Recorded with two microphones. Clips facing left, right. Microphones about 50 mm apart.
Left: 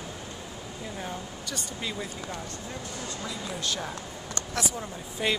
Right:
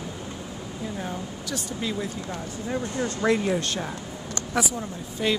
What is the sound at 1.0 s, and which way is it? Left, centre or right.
Speech, centre.